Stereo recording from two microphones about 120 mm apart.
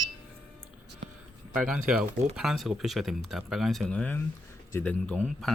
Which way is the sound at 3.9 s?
10° left (ahead or behind).